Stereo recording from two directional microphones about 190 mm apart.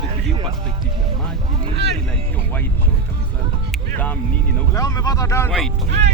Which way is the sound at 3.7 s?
10° left (ahead or behind).